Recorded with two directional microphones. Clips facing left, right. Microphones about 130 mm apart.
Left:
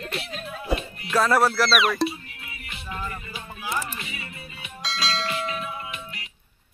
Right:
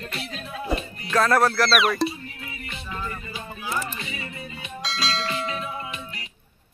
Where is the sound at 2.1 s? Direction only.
35° right (ahead or behind).